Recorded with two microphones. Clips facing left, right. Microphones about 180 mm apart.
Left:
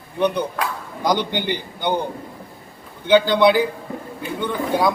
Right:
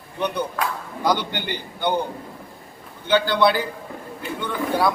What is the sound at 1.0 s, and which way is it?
Speech, 15° left (ahead or behind).